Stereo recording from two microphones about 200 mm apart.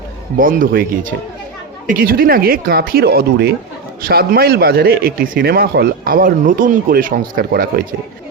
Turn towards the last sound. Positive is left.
turn(degrees=-45)  # may be behind; listen again after turning